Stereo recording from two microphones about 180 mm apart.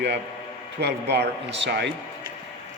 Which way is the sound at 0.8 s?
65° right (ahead or behind).